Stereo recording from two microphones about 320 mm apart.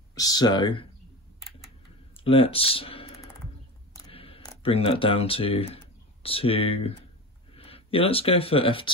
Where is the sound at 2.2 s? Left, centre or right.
Centre.